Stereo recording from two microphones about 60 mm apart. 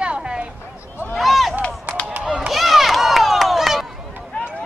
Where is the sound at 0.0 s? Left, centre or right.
Centre.